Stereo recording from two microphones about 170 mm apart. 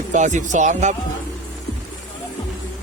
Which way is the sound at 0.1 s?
45° right (ahead or behind).